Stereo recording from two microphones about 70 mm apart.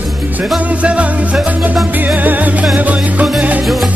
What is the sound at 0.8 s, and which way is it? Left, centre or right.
Music, centre.